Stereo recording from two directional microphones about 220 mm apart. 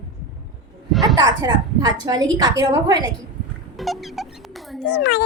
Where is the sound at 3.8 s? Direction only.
Centre (ahead or behind).